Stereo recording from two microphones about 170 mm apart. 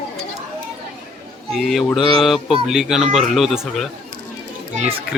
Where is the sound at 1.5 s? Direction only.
Centre (ahead or behind).